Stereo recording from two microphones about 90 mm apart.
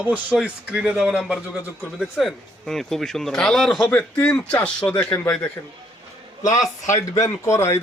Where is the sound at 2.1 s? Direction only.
5° left (ahead or behind).